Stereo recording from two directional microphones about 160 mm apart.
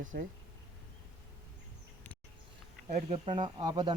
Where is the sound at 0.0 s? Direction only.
55° right (ahead or behind).